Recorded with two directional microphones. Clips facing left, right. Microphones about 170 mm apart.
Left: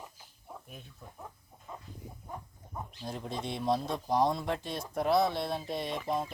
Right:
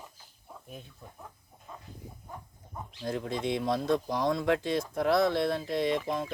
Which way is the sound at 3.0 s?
90° right.